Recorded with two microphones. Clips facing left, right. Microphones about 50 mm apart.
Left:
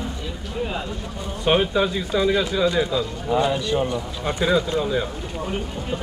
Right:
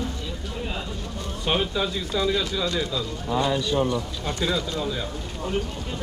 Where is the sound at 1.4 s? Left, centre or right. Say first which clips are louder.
Left 6 dB; centre.